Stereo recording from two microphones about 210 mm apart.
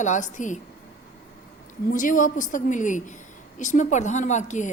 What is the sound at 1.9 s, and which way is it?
A woman's voice, 40° left (ahead or behind).